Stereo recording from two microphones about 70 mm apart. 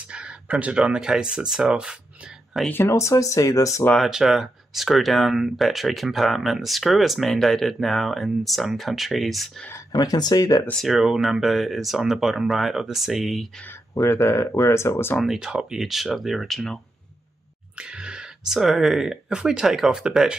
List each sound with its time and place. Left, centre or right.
0.0 s speech: centre
2.9 s speech: left
3.9 s speech: centre
9.9 s speech: left
10.8 s speech: centre
14.0 s speech: left
15.1 s speech: centre
17.7 s speech: centre